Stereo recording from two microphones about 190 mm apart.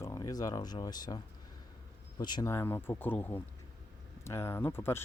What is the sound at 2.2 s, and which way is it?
Speech, 20° left (ahead or behind).